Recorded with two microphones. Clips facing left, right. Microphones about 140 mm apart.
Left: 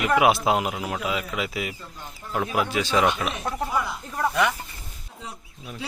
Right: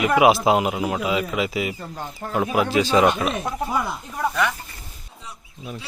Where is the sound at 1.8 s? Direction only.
60° right (ahead or behind).